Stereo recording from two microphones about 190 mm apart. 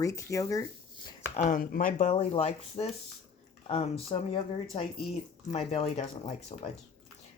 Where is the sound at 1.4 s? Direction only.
45° left (ahead or behind).